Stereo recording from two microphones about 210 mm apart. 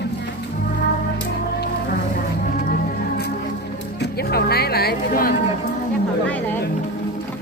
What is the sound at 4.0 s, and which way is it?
Music, 50° left (ahead or behind).